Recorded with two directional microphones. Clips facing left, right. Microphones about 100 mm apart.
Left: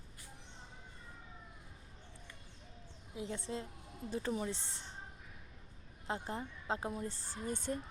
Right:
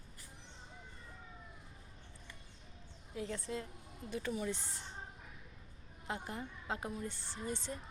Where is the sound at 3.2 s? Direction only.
25° left (ahead or behind).